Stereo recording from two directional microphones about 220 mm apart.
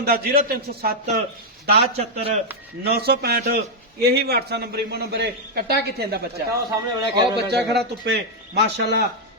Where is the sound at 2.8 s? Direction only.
45° right (ahead or behind).